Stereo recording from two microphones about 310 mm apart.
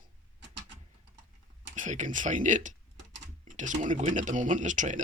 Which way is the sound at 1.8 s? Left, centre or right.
Right.